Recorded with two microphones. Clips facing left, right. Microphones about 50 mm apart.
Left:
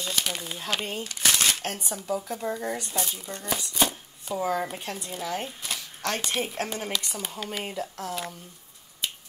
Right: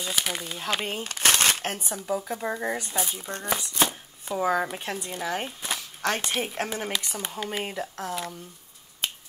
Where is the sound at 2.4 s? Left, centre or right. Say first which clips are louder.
Right 1 dB; centre.